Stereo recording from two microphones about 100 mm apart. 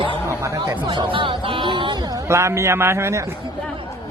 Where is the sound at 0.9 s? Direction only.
55° right (ahead or behind).